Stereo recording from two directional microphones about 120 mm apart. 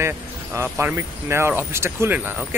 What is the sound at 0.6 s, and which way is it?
Speech, 20° right (ahead or behind).